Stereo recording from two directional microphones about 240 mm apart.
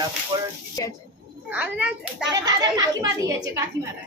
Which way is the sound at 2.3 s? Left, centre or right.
Centre.